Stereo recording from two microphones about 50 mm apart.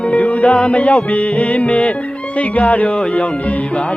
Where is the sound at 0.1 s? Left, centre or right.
Left.